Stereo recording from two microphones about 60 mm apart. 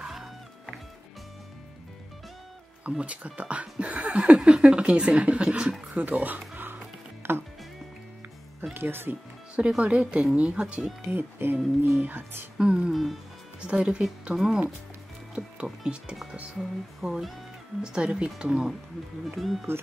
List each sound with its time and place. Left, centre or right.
0.0 s music: centre
2.9 s speech: centre
6.5 s music: right
7.2 s speech: right
8.7 s speech: right
9.6 s speech: centre
11.1 s speech: right
12.5 s speech: centre
12.9 s speech: centre
13.6 s speech: centre
16.5 s speech: centre
17.8 s speech: centre
19.2 s speech: centre